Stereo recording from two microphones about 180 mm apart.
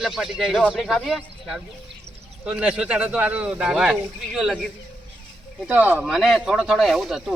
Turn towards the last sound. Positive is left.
turn(degrees=0)  # may be behind; listen again after turning